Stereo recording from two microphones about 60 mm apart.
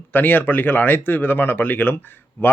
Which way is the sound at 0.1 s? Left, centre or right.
Left.